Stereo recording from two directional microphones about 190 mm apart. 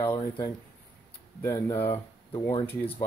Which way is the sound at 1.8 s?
30° left (ahead or behind).